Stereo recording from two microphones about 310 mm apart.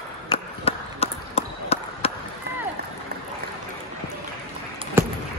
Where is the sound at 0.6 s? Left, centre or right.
Centre.